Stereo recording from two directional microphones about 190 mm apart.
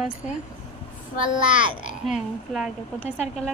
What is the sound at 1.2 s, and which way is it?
Speech, 25° right (ahead or behind).